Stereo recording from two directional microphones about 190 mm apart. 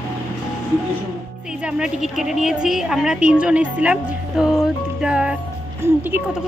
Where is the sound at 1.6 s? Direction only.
5° right (ahead or behind).